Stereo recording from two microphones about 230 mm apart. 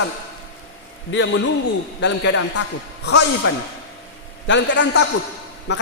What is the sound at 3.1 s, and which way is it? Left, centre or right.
A man's voice, left.